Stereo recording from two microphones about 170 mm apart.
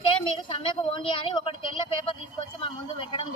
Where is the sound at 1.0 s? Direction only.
30° left (ahead or behind).